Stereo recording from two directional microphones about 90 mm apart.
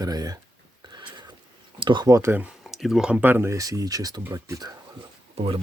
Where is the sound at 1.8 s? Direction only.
60° right (ahead or behind).